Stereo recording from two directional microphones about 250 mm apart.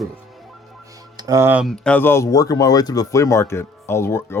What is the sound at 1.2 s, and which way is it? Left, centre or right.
Speech, centre.